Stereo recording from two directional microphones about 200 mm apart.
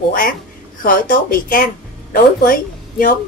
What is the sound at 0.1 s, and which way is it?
A woman's voice, 45° left (ahead or behind).